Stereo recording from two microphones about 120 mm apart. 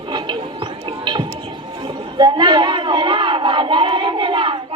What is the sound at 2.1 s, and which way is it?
Crowd, 35° right (ahead or behind).